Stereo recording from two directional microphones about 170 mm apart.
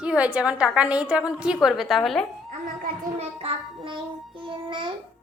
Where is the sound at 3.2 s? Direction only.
35° right (ahead or behind).